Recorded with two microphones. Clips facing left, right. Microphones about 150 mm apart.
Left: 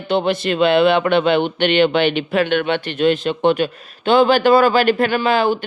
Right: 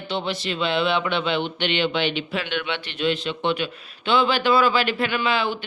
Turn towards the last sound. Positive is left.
turn(degrees=45)  # may be behind; listen again after turning